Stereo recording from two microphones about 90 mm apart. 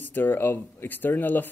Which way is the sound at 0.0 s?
20° left (ahead or behind).